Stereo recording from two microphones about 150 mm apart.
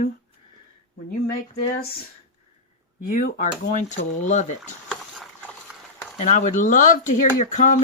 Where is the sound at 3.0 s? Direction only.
60° left (ahead or behind).